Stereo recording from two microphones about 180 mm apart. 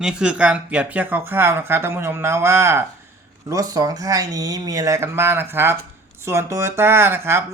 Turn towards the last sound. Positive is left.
turn(degrees=-10)  # may be behind; listen again after turning